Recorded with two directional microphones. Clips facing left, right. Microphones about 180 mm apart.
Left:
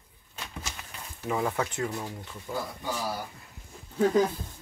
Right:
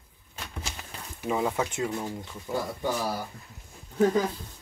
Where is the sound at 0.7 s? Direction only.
20° right (ahead or behind).